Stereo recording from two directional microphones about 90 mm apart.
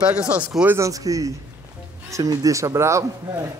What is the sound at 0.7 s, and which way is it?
Speech, 40° right (ahead or behind).